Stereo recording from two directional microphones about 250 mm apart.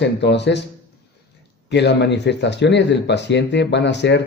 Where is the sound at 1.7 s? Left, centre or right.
Left.